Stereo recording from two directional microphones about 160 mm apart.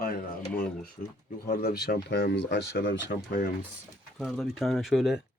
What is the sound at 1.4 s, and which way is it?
Speech, 75° left (ahead or behind).